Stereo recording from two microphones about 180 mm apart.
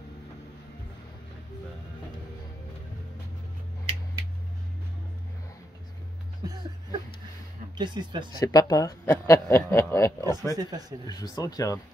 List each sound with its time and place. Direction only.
6.4 s speech: 20° right (ahead or behind)
7.7 s speech: 25° right (ahead or behind)
8.4 s a man's voice: 20° left (ahead or behind)
10.5 s speech: 20° right (ahead or behind)
11.1 s speech: 20° left (ahead or behind)